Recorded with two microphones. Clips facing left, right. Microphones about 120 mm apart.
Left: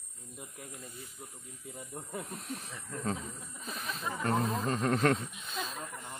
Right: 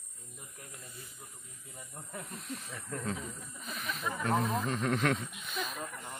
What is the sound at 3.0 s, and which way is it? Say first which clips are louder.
Speech: left 2 dB; 35° left (ahead or behind).